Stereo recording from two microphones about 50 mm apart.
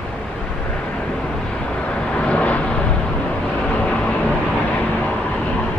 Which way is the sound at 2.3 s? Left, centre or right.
Left.